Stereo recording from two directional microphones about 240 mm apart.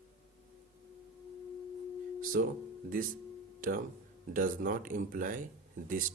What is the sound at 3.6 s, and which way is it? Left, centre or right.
Speech, right.